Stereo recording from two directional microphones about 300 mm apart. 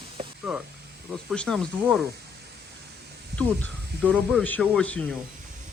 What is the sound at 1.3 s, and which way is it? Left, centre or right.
Speech, centre.